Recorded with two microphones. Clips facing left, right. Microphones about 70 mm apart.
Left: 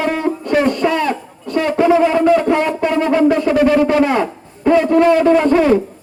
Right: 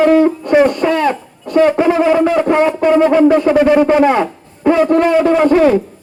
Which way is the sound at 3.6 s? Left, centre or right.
Centre.